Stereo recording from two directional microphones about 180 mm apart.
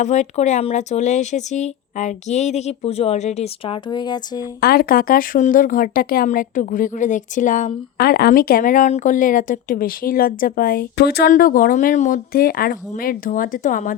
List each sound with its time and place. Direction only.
0.0 s speech: 40° left (ahead or behind)
3.8 s speech: 25° left (ahead or behind)
4.6 s speech: 55° left (ahead or behind)